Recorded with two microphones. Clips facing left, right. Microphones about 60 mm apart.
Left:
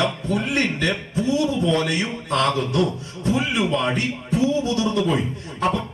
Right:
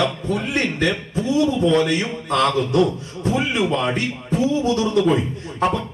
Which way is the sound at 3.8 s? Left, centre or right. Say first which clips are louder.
Right 1 dB; right.